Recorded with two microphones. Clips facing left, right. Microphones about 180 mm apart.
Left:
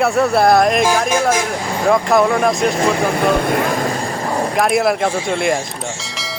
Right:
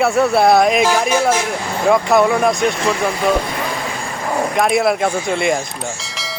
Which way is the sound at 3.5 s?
45° left (ahead or behind).